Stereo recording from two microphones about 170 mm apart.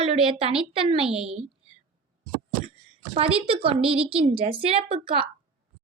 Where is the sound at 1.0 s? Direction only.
5° right (ahead or behind).